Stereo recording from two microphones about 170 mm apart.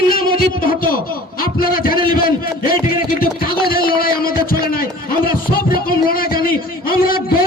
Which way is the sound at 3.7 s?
60° left (ahead or behind).